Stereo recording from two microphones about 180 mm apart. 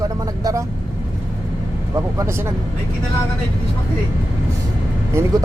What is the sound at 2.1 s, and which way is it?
Speech, 15° right (ahead or behind).